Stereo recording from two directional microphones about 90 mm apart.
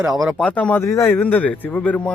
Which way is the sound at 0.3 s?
15° left (ahead or behind).